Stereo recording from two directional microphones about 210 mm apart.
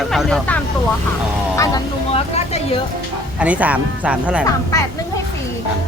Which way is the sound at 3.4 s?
5° right (ahead or behind).